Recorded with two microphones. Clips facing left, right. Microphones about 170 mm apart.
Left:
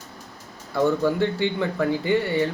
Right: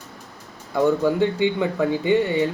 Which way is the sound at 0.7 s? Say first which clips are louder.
Right 2 dB; 15° right (ahead or behind).